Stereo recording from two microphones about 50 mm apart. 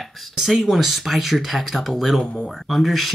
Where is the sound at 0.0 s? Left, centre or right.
Centre.